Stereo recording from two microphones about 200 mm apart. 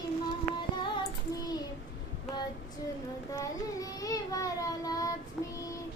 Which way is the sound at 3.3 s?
15° left (ahead or behind).